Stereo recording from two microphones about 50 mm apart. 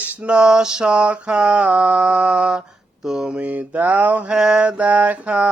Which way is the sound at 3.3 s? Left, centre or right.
Right.